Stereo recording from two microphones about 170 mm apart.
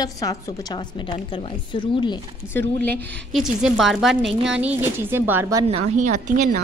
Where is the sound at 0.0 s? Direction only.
20° left (ahead or behind).